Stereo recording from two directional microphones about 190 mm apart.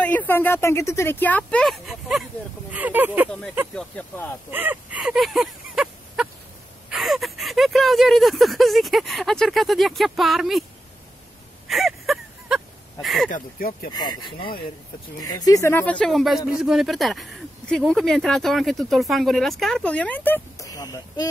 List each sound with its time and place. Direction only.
0.0 s speech: 10° left (ahead or behind); by 3.3 s 10° right (ahead or behind)
3.3 s speech: centre (ahead or behind)
4.5 s a sound: 10° right (ahead or behind)
6.9 s speech: centre (ahead or behind)
11.6 s a sound: centre (ahead or behind)
13.0 s speech: centre (ahead or behind)
13.3 s speech: 50° left (ahead or behind)
13.9 s speech: 25° left (ahead or behind)